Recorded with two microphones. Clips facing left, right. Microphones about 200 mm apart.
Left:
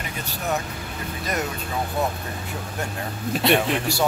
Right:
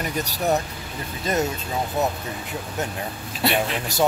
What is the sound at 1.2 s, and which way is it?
Speech, 25° right (ahead or behind).